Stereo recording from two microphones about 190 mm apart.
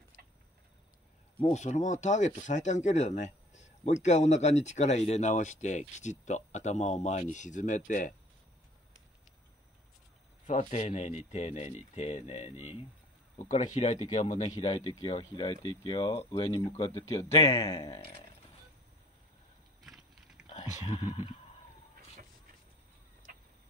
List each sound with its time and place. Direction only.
1.4 s speech: 35° left (ahead or behind)
10.4 s speech: 35° left (ahead or behind); by 18.0 s 20° left (ahead or behind)
19.8 s vehicle: centre (ahead or behind)
20.5 s speech: 40° left (ahead or behind)